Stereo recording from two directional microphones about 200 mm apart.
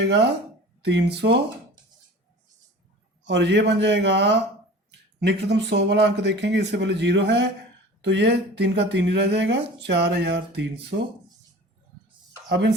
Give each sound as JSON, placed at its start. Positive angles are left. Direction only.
{"t": 0.0, "sound": "speech", "side_deg": -60}
{"t": 3.2, "sound": "speech", "side_deg": -60}
{"t": 12.5, "sound": "speech", "side_deg": -60}